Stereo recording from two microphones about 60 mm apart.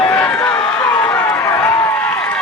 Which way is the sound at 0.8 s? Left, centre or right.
Left.